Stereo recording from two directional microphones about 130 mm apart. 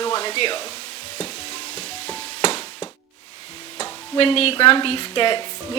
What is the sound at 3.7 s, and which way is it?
Speech, 50° left (ahead or behind).